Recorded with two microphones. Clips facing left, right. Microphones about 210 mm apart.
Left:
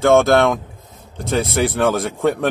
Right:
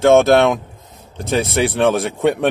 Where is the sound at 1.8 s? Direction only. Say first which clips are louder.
Right 2 dB; 25° right (ahead or behind).